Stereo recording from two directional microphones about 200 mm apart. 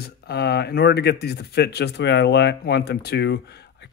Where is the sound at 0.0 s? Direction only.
55° left (ahead or behind).